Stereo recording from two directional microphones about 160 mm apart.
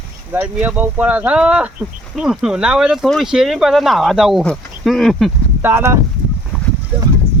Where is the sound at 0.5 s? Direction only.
10° right (ahead or behind).